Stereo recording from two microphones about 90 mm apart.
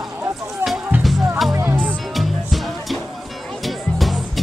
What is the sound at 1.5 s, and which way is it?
Music, 25° right (ahead or behind).